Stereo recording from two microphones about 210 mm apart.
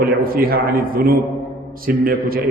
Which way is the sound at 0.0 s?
45° right (ahead or behind).